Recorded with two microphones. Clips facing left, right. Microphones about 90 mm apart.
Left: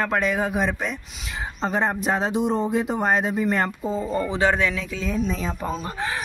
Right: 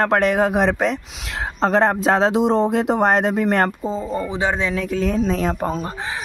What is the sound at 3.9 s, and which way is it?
Speech, 20° right (ahead or behind).